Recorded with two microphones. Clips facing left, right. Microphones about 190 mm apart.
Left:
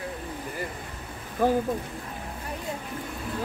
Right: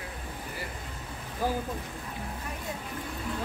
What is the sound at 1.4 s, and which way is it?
Speech, 55° left (ahead or behind).